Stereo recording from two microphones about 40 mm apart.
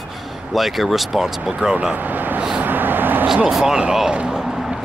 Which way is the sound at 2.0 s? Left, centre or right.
Right.